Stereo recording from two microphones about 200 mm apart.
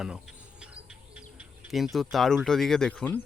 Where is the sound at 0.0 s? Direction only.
5° right (ahead or behind).